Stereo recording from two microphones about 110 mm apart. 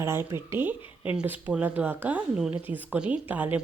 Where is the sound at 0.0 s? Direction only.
25° right (ahead or behind).